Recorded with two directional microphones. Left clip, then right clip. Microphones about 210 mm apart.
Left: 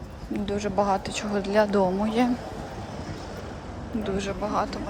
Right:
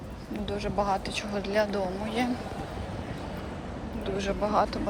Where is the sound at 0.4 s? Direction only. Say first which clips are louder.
Left 4 dB; 25° left (ahead or behind).